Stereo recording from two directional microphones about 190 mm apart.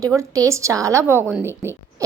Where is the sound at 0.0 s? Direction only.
15° right (ahead or behind).